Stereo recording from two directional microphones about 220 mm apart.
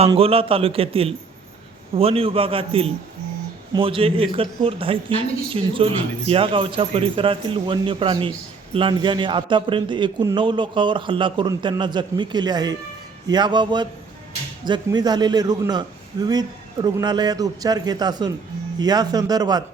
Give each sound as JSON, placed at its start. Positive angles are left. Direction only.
{"t": 0.0, "sound": "a man's voice", "side_deg": -25}